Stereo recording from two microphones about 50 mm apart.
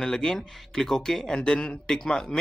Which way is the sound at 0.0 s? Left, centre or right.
Centre.